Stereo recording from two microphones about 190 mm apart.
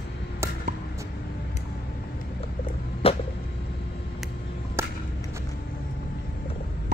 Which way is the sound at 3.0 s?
30° left (ahead or behind).